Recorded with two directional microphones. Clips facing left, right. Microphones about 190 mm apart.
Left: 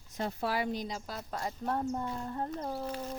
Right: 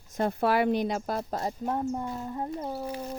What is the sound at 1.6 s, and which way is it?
Speech, 15° right (ahead or behind).